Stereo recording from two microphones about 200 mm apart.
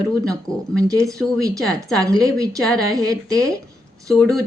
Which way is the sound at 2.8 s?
20° right (ahead or behind).